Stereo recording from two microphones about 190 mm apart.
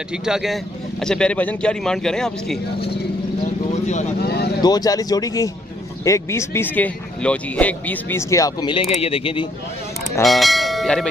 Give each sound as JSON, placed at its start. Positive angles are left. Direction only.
{"t": 0.1, "sound": "a man's voice", "side_deg": -5}
{"t": 3.8, "sound": "speech", "side_deg": 35}
{"t": 4.2, "sound": "vehicle", "side_deg": 55}
{"t": 4.6, "sound": "speech", "side_deg": 20}
{"t": 10.2, "sound": "bell", "side_deg": 0}